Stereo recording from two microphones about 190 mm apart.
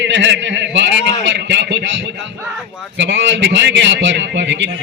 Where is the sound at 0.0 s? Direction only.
70° right (ahead or behind).